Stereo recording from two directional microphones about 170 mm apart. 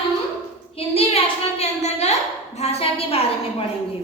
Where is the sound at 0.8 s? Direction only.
35° left (ahead or behind).